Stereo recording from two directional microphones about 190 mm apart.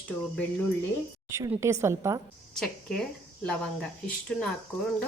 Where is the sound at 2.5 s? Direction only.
5° left (ahead or behind).